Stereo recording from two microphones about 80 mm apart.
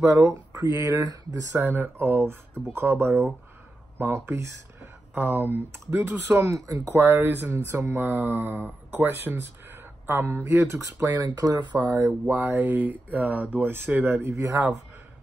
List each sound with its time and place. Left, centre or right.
0.0 s speech: right
1.6 s speech: right
3.1 s speech: centre
4.0 s speech: right
11.2 s speech: right
11.7 s speech: right
14.2 s speech: right